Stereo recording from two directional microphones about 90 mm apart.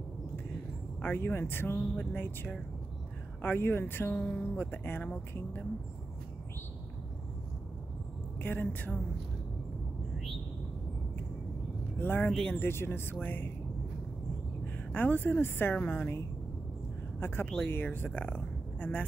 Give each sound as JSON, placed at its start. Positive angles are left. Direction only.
{"t": 1.0, "sound": "speech", "side_deg": 25}
{"t": 8.4, "sound": "speech", "side_deg": 20}
{"t": 12.0, "sound": "speech", "side_deg": 20}
{"t": 12.3, "sound": "speech", "side_deg": 5}
{"t": 12.5, "sound": "speech", "side_deg": 25}
{"t": 14.9, "sound": "speech", "side_deg": 20}
{"t": 17.2, "sound": "speech", "side_deg": 25}